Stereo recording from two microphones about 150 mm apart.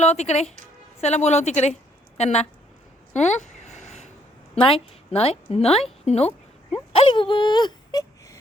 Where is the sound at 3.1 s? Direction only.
50° left (ahead or behind).